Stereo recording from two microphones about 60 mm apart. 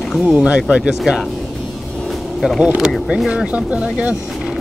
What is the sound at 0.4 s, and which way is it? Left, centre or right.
Speech, centre.